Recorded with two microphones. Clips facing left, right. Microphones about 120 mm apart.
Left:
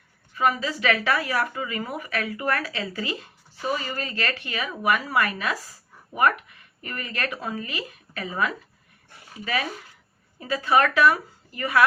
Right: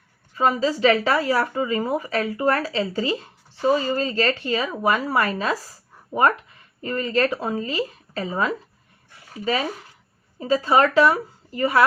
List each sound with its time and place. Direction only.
0.3 s speech: 30° right (ahead or behind)